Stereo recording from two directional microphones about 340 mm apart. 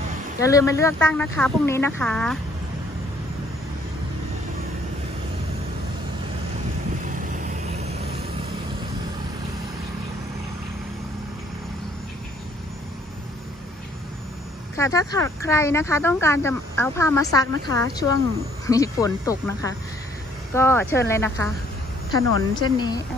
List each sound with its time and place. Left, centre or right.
0.4 s speech: centre
7.2 s vehicle: right
14.8 s speech: centre
22.5 s speech: centre